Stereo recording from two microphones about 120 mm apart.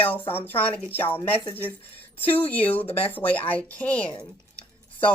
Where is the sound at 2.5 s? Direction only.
15° left (ahead or behind).